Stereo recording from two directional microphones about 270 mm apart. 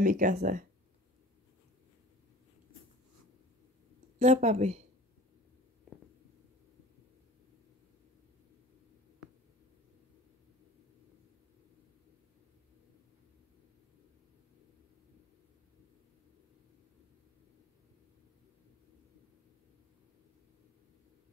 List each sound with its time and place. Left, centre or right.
0.0 s speech: right
4.2 s speech: right